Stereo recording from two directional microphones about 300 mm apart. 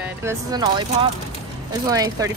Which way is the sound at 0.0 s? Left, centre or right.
Centre.